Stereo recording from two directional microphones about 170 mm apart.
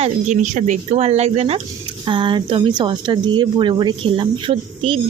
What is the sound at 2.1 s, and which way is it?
Speech, 30° right (ahead or behind).